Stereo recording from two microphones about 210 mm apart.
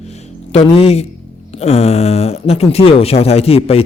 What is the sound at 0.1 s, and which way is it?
Music, 30° left (ahead or behind).